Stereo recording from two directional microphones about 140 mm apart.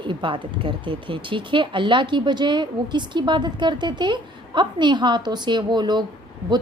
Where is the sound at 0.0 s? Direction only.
35° right (ahead or behind).